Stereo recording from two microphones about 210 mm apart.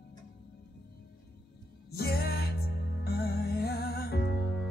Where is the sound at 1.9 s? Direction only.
50° left (ahead or behind).